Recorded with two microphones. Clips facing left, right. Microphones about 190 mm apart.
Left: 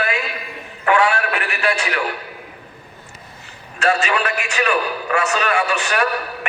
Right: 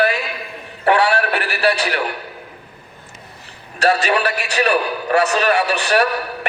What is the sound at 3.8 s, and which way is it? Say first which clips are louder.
A man's voice: right 2 dB; 35° right (ahead or behind).